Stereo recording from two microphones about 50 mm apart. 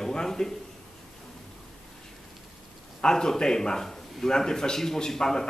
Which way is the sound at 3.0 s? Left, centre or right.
Centre.